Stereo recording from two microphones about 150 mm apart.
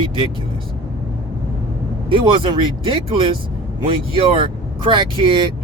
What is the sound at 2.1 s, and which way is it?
Speech, 35° right (ahead or behind).